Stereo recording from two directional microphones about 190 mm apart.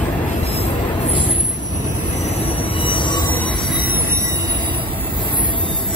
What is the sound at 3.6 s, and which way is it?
Train wheels squealing, 10° right (ahead or behind).